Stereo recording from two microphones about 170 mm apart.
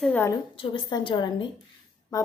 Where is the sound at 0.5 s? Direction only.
30° left (ahead or behind).